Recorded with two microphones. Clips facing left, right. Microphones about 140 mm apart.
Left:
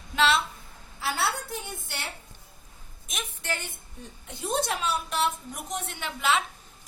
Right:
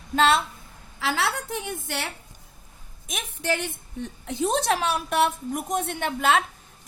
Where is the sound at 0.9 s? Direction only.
90° right.